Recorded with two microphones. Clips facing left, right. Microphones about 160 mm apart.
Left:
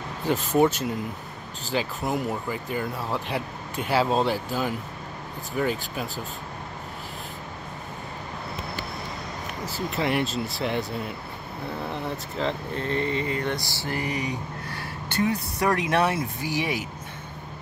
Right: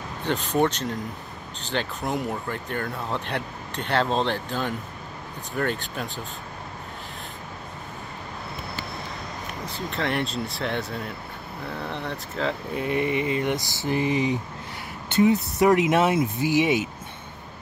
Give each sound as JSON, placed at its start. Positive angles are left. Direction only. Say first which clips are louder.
{"t": 0.2, "sound": "speech", "louder": "left 2 dB", "side_deg": 5}
{"t": 9.7, "sound": "speech", "louder": "left 2 dB", "side_deg": 5}
{"t": 12.7, "sound": "a sound", "louder": "right 4 dB", "side_deg": -15}